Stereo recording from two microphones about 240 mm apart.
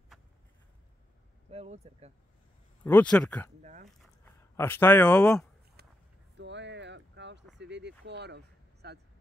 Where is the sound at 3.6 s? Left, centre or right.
Right.